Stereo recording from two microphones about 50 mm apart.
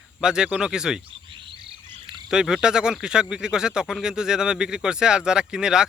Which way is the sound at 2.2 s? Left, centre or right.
Centre.